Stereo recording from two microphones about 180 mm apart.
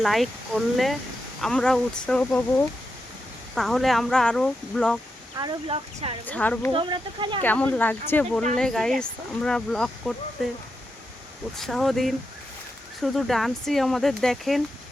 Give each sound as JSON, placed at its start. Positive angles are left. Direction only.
{"t": 0.0, "sound": "speech", "side_deg": 0}
{"t": 5.4, "sound": "speech", "side_deg": -25}
{"t": 6.2, "sound": "speech", "side_deg": 10}
{"t": 6.7, "sound": "speech", "side_deg": -25}
{"t": 7.4, "sound": "speech", "side_deg": 10}
{"t": 11.5, "sound": "speech", "side_deg": 0}